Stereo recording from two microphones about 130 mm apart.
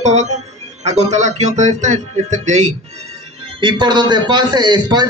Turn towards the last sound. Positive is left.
turn(degrees=-35)  # may be behind; listen again after turning